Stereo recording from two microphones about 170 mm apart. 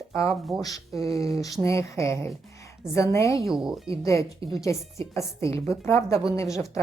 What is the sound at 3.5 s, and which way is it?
Speech, centre (ahead or behind).